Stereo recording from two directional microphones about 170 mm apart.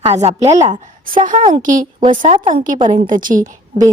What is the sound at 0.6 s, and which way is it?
A woman's voice, 50° right (ahead or behind).